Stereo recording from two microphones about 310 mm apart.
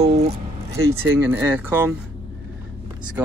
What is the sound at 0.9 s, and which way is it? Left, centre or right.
Speech, centre.